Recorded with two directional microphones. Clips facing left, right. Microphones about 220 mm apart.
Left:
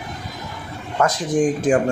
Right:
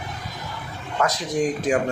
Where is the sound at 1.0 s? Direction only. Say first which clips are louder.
Left 4 dB; 50° left (ahead or behind).